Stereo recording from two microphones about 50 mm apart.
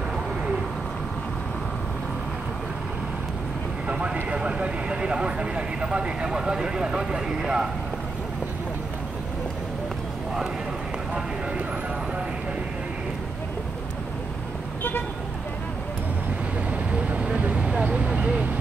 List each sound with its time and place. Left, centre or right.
3.8 s speech: right
14.8 s vehicle: left
16.9 s vehicle: right